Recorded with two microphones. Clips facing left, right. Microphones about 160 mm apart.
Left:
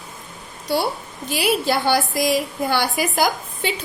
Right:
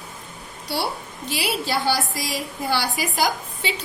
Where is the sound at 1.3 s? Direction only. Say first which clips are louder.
Left 5 dB; 50° left (ahead or behind).